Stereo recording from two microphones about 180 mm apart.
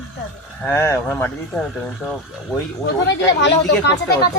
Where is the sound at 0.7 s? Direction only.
10° left (ahead or behind).